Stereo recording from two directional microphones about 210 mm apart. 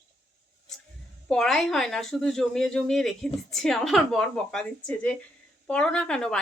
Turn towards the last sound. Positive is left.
turn(degrees=5)  # may be behind; listen again after turning